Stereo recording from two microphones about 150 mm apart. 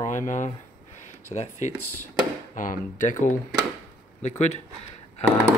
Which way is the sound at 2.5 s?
60° left (ahead or behind).